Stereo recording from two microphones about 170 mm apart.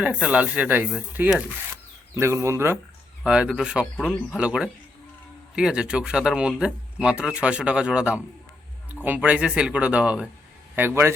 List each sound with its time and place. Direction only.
0.0 s speech: 5° right (ahead or behind)
2.1 s speech: 15° right (ahead or behind)